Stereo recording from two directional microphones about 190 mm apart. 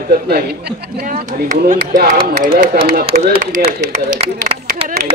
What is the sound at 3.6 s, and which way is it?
Speech, 45° right (ahead or behind).